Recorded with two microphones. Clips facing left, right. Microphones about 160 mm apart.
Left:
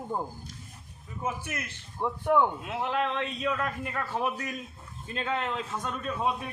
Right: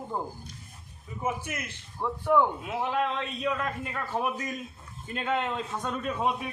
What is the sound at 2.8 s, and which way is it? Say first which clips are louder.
Speech: right 1 dB; 15° right (ahead or behind).